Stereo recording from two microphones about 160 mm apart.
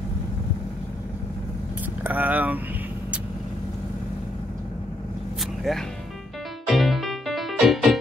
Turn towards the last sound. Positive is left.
turn(degrees=0)  # may be behind; listen again after turning